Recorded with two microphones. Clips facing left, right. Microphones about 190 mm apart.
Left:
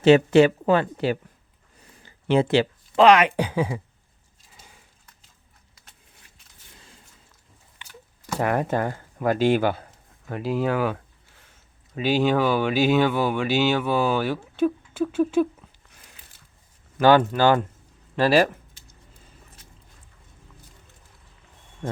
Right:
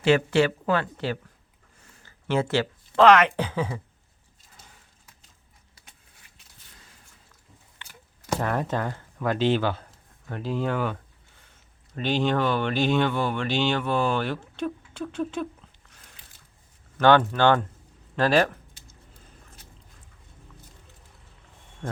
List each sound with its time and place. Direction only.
0.0 s speech: 20° left (ahead or behind)
8.9 s a sound: 10° left (ahead or behind)
9.4 s speech: 10° left (ahead or behind)
17.0 s speech: 10° left (ahead or behind)